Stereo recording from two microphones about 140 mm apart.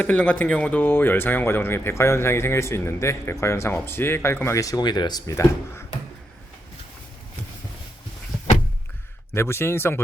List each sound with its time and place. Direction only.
0.0 s speech: 10° left (ahead or behind)
9.3 s speech: 20° left (ahead or behind)